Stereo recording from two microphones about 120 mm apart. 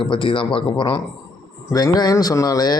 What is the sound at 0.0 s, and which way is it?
Speech, 45° left (ahead or behind).